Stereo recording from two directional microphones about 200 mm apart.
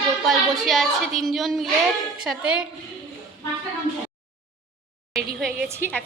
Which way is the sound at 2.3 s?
5° right (ahead or behind).